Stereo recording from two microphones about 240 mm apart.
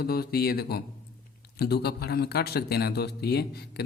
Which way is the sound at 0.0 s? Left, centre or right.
Left.